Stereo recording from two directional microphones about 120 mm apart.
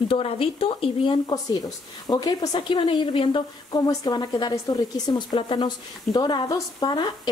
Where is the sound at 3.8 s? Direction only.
30° left (ahead or behind).